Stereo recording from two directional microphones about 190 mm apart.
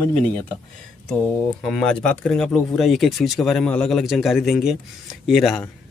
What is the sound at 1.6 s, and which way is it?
Speech, 5° left (ahead or behind).